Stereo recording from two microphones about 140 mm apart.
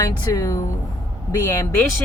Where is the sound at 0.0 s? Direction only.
25° left (ahead or behind).